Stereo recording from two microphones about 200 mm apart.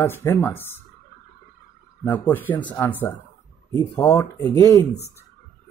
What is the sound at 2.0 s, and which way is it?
Speech, 10° left (ahead or behind).